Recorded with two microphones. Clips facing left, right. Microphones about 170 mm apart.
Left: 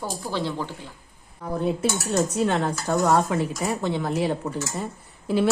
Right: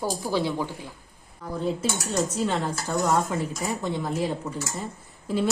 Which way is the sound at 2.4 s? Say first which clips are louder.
Left 3 dB; 65° left (ahead or behind).